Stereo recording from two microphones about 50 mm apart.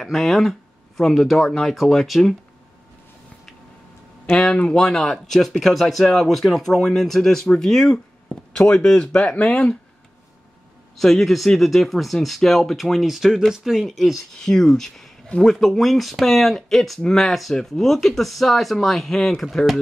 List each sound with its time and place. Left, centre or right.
0.0 s speech: centre
4.6 s speech: centre
8.5 s speech: centre
11.0 s speech: centre
14.4 s speech: centre